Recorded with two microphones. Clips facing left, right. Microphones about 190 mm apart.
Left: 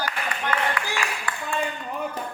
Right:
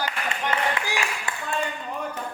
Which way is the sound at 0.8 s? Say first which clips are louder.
Even; 20° right (ahead or behind).